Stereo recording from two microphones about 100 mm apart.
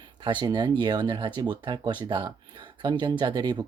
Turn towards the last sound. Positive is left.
turn(degrees=-45)  # may be behind; listen again after turning